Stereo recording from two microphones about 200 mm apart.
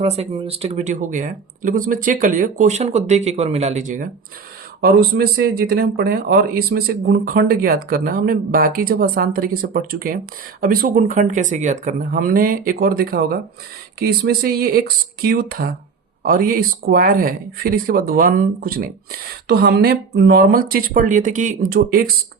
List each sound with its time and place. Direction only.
0.0 s speech: 30° right (ahead or behind)
4.8 s speech: 50° right (ahead or behind)